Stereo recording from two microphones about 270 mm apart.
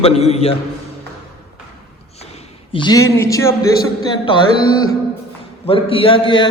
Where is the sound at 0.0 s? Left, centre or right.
Left.